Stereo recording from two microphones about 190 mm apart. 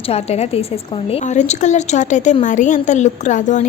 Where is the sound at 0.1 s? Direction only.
35° left (ahead or behind).